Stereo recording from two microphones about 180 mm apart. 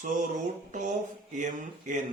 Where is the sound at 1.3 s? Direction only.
45° right (ahead or behind).